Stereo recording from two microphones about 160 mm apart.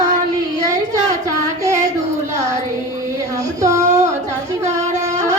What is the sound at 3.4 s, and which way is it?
Child singing, 20° right (ahead or behind).